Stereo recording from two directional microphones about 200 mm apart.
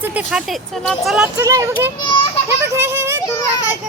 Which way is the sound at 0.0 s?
5° right (ahead or behind).